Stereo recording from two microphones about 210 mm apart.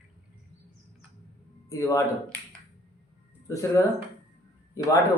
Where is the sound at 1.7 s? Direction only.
15° left (ahead or behind).